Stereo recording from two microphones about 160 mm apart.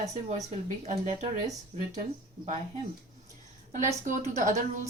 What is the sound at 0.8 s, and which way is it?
Speech, 45° right (ahead or behind).